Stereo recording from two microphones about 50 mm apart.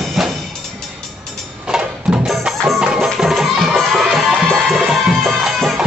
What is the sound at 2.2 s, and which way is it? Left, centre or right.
Music, centre.